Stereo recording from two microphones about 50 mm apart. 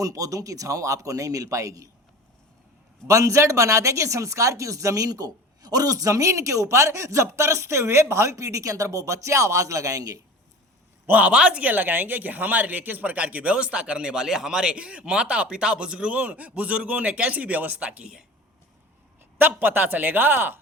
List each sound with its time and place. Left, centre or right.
0.1 s speech: right
3.1 s speech: right
6.1 s speech: right
11.2 s speech: right
19.4 s a man's voice: right